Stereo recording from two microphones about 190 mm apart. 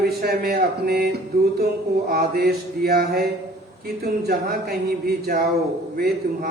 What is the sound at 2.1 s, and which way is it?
A man's voice, 55° right (ahead or behind).